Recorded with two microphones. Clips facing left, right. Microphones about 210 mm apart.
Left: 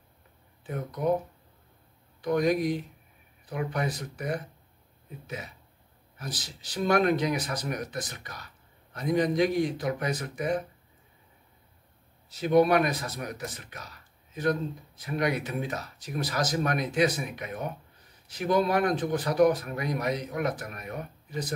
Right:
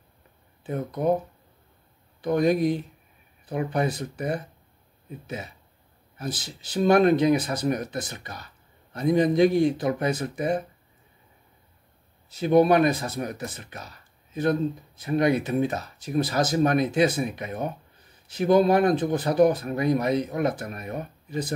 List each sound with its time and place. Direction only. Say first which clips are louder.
0.7 s speech: right 5 dB; 30° right (ahead or behind)
2.2 s speech: right 3 dB; 30° right (ahead or behind)
12.4 s speech: right 3 dB; 30° right (ahead or behind)